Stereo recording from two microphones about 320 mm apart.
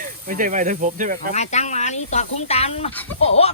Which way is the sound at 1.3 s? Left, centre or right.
Left.